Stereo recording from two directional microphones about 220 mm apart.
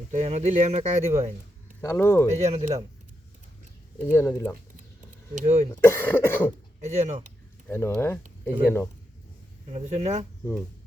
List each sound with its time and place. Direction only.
0.1 s speech: 30° right (ahead or behind)
1.8 s cough: 10° left (ahead or behind)
2.3 s speech: 30° right (ahead or behind)
4.0 s cough: 15° left (ahead or behind)
5.3 s speech: 35° right (ahead or behind)
5.8 s cough: 10° left (ahead or behind)
6.8 s speech: 30° right (ahead or behind)
7.7 s cough: 10° left (ahead or behind)
7.9 s speech: centre (ahead or behind)
9.7 s speech: 30° right (ahead or behind)